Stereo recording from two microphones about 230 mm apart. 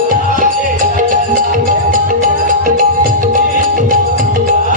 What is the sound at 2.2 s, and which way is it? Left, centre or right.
Music, right.